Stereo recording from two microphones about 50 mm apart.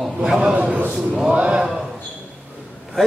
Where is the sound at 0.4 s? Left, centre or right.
Right.